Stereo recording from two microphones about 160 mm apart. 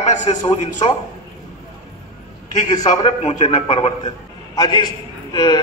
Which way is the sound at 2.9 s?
40° left (ahead or behind).